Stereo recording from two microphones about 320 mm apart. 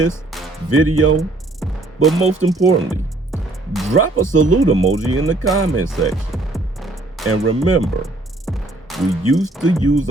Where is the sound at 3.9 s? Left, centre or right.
Right.